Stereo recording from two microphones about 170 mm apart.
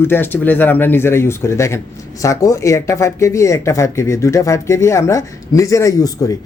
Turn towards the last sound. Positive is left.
turn(degrees=20)  # may be behind; listen again after turning